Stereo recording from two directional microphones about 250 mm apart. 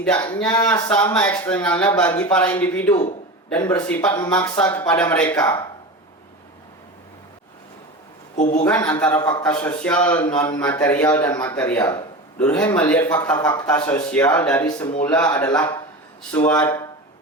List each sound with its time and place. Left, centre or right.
0.0 s speech: centre
8.4 s a man's voice: left
8.6 s speech: centre